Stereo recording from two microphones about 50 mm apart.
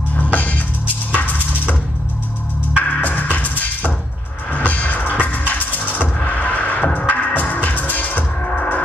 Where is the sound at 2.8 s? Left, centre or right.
Left.